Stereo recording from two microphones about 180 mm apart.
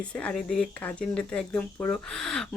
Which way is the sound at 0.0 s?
5° left (ahead or behind).